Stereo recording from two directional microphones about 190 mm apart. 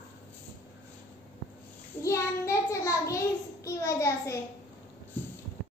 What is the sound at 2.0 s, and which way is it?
Child singing, 15° left (ahead or behind).